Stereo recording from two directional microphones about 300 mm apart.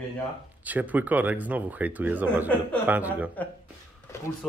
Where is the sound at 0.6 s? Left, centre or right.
Centre.